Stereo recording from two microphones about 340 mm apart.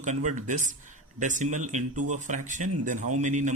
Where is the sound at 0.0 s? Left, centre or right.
Right.